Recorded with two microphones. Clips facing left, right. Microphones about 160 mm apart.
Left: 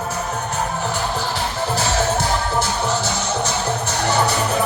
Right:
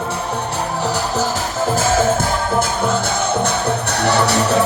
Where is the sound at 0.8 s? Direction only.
40° right (ahead or behind).